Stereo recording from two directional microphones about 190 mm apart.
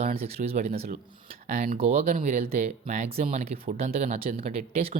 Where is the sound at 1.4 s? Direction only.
45° right (ahead or behind).